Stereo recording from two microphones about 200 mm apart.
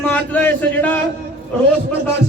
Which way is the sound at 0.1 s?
10° left (ahead or behind).